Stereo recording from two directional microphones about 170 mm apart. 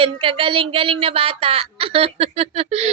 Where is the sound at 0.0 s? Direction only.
30° right (ahead or behind).